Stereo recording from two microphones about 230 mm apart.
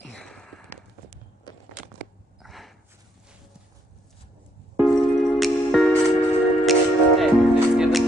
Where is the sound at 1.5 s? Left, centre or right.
Centre.